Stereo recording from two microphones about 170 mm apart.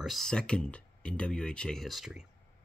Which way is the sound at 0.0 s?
Centre (ahead or behind).